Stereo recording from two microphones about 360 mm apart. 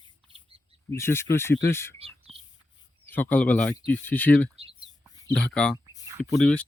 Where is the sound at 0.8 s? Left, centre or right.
Centre.